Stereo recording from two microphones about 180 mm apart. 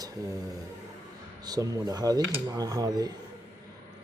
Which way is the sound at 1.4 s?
20° right (ahead or behind).